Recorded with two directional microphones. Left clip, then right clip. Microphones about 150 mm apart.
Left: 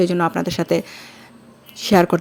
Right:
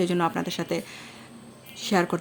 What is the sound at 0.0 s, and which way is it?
Speech, 30° left (ahead or behind).